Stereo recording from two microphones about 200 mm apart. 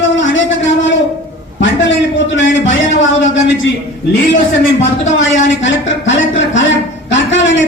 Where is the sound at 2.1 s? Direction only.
65° left (ahead or behind).